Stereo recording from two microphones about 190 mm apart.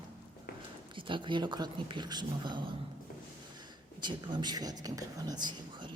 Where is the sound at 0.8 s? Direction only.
25° right (ahead or behind).